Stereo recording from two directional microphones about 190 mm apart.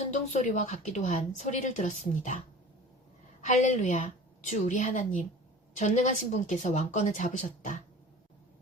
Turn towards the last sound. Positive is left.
turn(degrees=40)  # may be behind; listen again after turning